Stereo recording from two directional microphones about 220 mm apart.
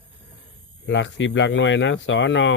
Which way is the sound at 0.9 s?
55° left (ahead or behind).